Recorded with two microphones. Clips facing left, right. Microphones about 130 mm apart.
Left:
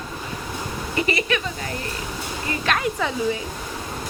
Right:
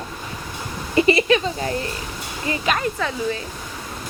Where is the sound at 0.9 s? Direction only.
30° right (ahead or behind).